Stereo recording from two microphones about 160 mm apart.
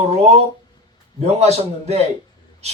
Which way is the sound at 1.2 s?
40° right (ahead or behind).